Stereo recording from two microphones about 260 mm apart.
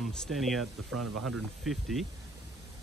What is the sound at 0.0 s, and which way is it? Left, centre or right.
Speech, centre.